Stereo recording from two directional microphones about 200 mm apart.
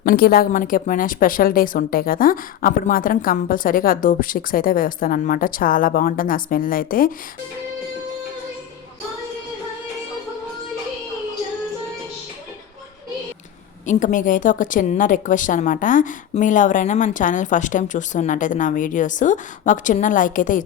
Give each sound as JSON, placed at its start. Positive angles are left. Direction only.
{"t": 0.0, "sound": "a woman's voice", "side_deg": 50}
{"t": 13.8, "sound": "a woman's voice", "side_deg": 40}